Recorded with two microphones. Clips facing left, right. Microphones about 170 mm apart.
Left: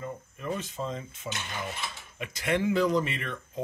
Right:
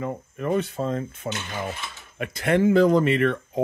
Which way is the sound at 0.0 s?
60° right (ahead or behind).